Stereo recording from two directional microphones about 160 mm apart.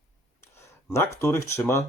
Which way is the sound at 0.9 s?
15° left (ahead or behind).